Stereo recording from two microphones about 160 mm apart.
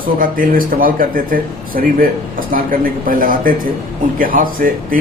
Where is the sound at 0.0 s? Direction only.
60° right (ahead or behind).